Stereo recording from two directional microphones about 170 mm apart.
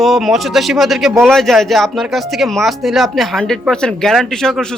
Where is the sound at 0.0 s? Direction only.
Centre (ahead or behind).